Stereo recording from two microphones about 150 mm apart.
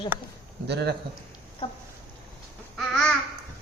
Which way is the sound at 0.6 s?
90° right.